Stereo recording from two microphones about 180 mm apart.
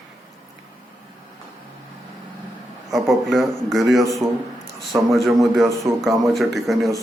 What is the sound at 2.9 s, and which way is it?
A man's voice, centre (ahead or behind).